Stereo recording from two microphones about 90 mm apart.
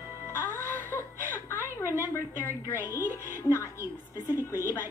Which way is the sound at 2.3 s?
25° left (ahead or behind).